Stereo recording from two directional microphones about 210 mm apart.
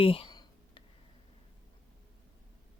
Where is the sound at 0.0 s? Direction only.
25° left (ahead or behind).